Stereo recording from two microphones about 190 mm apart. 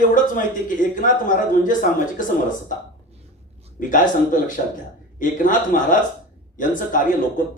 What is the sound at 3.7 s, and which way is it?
A man's voice, 45° left (ahead or behind).